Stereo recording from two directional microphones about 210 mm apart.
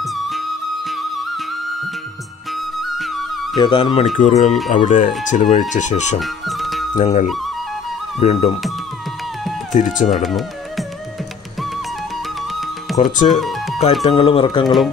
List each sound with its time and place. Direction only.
0.0 s music: centre (ahead or behind)
2.8 s music: centre (ahead or behind)
3.5 s speech: 20° left (ahead or behind)
6.1 s music: centre (ahead or behind)
7.0 s speech: 35° left (ahead or behind)
9.9 s speech: 35° left (ahead or behind)
10.2 s music: centre (ahead or behind)
12.9 s speech: 35° left (ahead or behind)
13.3 s music: centre (ahead or behind)
14.0 s speech: 25° left (ahead or behind)
14.6 s speech: centre (ahead or behind)